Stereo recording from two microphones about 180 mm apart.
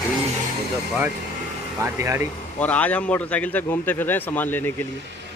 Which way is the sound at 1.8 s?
15° right (ahead or behind).